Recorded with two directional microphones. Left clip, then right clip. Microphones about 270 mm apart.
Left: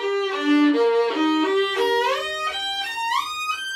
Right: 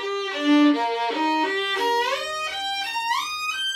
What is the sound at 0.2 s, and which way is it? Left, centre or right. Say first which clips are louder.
Violin: right 2 dB; centre.